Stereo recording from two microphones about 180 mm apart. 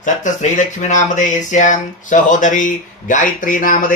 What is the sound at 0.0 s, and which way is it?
Speech, 45° left (ahead or behind).